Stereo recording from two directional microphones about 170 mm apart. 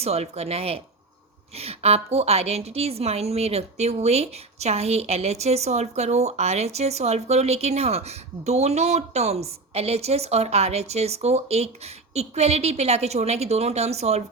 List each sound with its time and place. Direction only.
0.0 s a woman's voice: 40° right (ahead or behind)